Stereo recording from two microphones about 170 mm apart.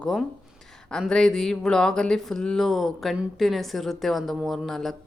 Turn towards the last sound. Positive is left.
turn(degrees=0)  # may be behind; listen again after turning